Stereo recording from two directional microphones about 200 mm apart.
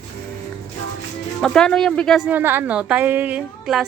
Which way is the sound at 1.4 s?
5° left (ahead or behind).